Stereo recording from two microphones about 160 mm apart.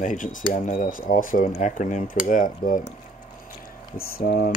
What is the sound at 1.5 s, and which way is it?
Cutlery, 50° left (ahead or behind).